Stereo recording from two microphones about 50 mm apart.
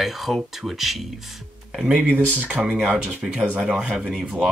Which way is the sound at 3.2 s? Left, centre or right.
Centre.